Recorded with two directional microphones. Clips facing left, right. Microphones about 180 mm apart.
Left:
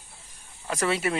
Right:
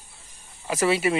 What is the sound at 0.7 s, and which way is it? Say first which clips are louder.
Speech: right 4 dB; 5° right (ahead or behind).